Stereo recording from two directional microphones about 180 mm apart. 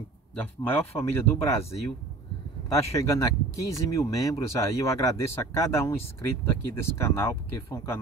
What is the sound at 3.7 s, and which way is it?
Speech, 20° left (ahead or behind).